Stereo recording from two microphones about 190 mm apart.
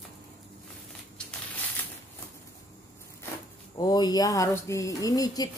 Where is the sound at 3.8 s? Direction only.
20° left (ahead or behind).